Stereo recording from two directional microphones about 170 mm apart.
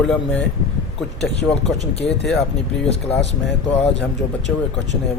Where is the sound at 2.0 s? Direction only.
85° left.